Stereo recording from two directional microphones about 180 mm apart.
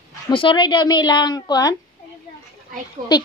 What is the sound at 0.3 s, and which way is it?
A woman's voice, 30° left (ahead or behind).